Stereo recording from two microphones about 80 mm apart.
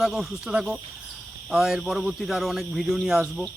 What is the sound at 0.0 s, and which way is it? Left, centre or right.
Speech, centre.